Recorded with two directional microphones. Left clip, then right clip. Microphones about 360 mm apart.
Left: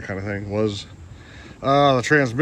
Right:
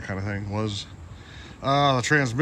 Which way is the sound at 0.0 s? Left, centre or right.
Centre.